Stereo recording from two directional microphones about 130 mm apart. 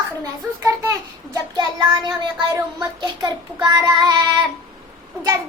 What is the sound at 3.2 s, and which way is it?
Child singing, 30° right (ahead or behind).